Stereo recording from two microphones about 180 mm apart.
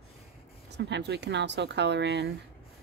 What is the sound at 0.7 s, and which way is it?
Speech, 75° right (ahead or behind).